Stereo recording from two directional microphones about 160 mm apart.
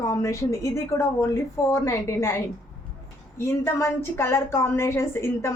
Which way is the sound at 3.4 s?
15° left (ahead or behind).